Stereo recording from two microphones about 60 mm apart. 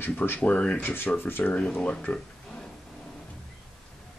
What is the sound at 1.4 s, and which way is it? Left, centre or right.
Speech, left.